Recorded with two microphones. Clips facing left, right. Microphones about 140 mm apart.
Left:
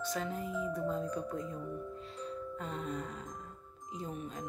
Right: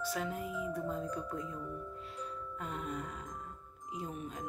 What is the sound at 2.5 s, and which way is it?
Speech, 5° right (ahead or behind).